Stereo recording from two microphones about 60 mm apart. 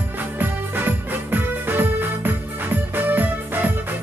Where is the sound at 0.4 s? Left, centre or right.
Right.